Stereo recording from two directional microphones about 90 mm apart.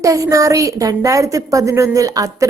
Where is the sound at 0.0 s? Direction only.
40° right (ahead or behind).